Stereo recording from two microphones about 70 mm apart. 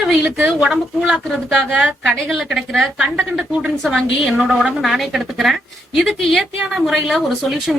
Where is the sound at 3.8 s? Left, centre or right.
Centre.